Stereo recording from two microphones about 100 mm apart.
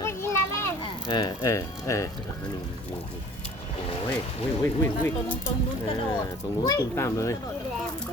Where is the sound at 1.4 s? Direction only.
30° left (ahead or behind).